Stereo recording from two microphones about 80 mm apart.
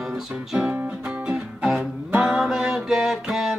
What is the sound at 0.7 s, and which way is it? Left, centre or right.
Music, centre.